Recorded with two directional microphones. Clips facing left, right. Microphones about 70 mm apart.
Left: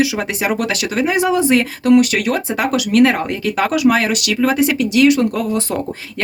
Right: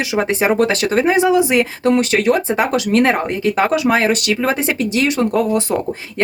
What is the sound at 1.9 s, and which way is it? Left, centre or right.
Speech, right.